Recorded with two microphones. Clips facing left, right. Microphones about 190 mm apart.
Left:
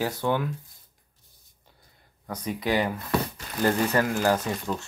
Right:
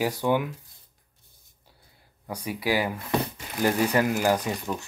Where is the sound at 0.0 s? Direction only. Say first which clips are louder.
Right 2 dB; 15° right (ahead or behind).